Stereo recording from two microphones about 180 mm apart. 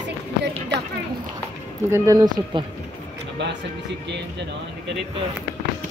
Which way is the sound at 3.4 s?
70° right (ahead or behind).